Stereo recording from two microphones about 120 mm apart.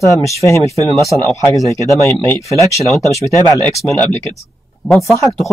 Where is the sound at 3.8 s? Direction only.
10° left (ahead or behind).